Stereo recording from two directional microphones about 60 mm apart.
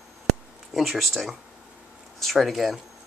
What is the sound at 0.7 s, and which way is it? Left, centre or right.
Speech, centre.